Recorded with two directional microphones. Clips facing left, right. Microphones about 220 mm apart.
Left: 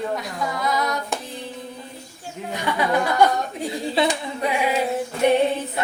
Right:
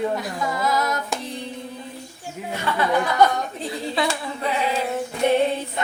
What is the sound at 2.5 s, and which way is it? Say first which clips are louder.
Speech: even; 15° left (ahead or behind).